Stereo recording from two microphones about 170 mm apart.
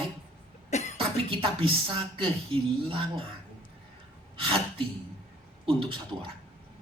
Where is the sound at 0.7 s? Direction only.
40° left (ahead or behind).